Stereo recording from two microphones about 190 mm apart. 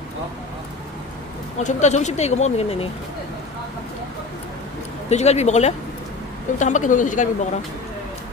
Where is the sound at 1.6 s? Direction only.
40° left (ahead or behind).